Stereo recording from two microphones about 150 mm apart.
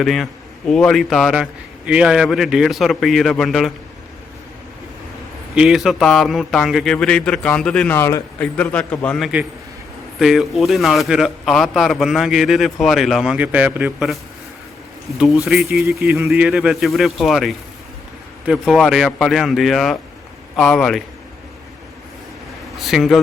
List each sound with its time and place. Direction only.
0.0 s a man's voice: centre (ahead or behind)
5.5 s a man's voice: 5° right (ahead or behind)
7.9 s a man's voice: 15° left (ahead or behind); by 14.2 s 5° right (ahead or behind)
15.4 s a man's voice: centre (ahead or behind)
16.0 s speech: 20° right (ahead or behind)
16.3 s a man's voice: 5° right (ahead or behind)
22.8 s a man's voice: centre (ahead or behind)